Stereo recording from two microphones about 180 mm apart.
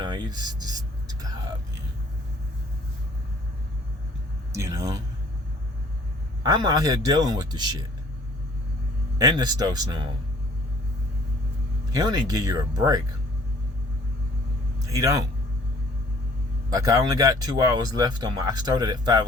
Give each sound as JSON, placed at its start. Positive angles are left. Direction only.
{"t": 0.0, "sound": "a sound", "side_deg": -25}
{"t": 4.5, "sound": "speech", "side_deg": -15}
{"t": 6.4, "sound": "speech", "side_deg": -20}
{"t": 9.1, "sound": "speech", "side_deg": -20}
{"t": 11.9, "sound": "speech", "side_deg": -20}
{"t": 14.8, "sound": "a man's voice", "side_deg": -20}
{"t": 16.6, "sound": "speech", "side_deg": -20}